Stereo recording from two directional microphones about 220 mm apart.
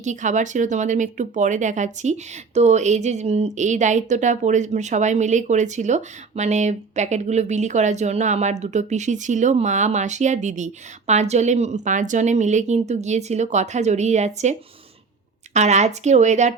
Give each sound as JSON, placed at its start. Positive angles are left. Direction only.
{"t": 0.0, "sound": "speech", "side_deg": -35}
{"t": 15.5, "sound": "speech", "side_deg": -30}